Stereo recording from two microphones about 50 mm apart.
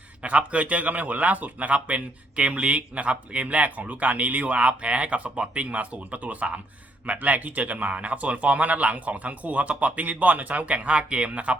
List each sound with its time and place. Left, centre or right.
0.2 s a man's voice: right